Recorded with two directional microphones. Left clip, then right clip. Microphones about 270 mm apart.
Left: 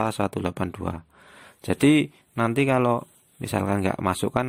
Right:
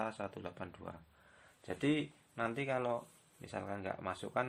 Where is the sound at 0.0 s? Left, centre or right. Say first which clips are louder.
Left 15 dB; left.